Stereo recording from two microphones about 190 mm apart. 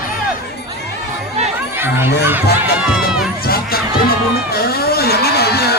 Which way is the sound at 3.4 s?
50° left (ahead or behind).